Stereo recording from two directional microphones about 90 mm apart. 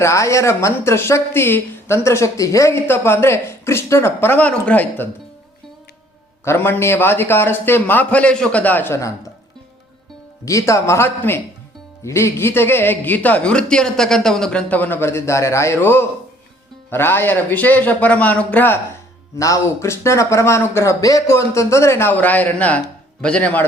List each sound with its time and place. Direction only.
0.0 s a woman's voice: 35° left (ahead or behind); by 5.0 s 20° left (ahead or behind)
6.4 s a woman's voice: 30° left (ahead or behind)
8.9 s a man's voice: 35° left (ahead or behind)
10.4 s a man's voice: 35° left (ahead or behind); by 14.6 s 5° left (ahead or behind)
14.7 s a woman's voice: 20° left (ahead or behind)
19.4 s a man's voice: 35° left (ahead or behind)
22.1 s a man's voice: 20° left (ahead or behind)